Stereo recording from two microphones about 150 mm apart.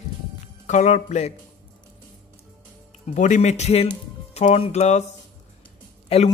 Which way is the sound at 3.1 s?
55° left (ahead or behind).